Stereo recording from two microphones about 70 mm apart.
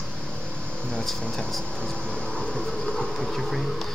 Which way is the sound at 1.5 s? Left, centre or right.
Centre.